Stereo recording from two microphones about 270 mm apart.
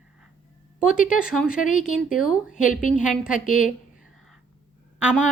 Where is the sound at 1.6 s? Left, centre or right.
Left.